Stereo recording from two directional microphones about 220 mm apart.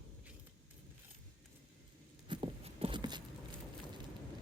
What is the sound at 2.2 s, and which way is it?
Horse, 25° right (ahead or behind).